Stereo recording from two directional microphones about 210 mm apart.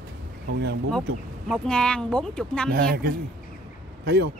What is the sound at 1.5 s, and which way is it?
Speech, 5° left (ahead or behind).